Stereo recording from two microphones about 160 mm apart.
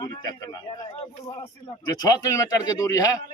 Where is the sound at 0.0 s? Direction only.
25° left (ahead or behind).